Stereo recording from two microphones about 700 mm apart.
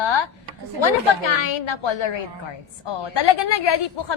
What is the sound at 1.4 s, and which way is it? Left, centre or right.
A woman's voice, left.